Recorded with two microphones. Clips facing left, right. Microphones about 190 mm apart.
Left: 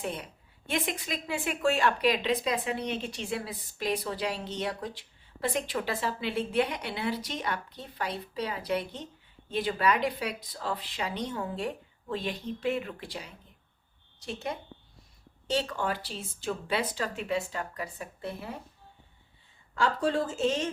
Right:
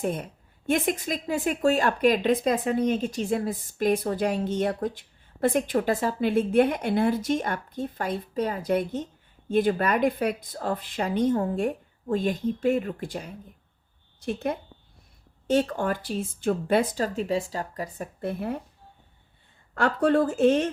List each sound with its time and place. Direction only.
0.0 s a woman's voice: 50° right (ahead or behind)
19.7 s a woman's voice: 60° right (ahead or behind)